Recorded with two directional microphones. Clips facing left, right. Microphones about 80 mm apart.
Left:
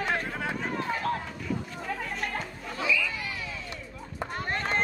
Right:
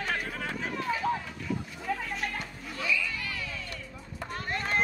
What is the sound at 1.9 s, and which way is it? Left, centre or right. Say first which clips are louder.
Chatter: right 2 dB; centre.